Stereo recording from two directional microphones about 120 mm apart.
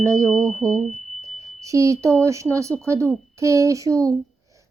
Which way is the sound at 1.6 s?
25° right (ahead or behind).